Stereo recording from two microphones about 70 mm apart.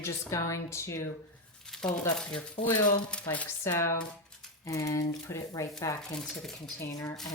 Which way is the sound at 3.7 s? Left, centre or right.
Left.